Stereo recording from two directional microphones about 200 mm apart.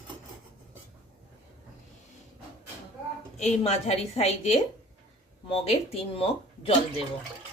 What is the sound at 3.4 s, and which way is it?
A woman's voice, 35° left (ahead or behind).